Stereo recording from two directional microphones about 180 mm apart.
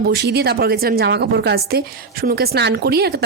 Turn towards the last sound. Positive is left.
turn(degrees=-60)  # may be behind; listen again after turning